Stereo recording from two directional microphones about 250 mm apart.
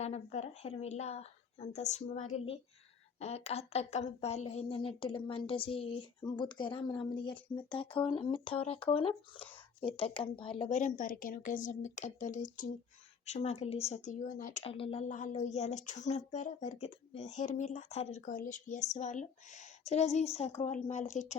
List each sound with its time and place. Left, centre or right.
0.0 s speech: left